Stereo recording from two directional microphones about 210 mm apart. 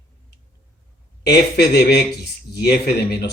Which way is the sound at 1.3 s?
50° left (ahead or behind).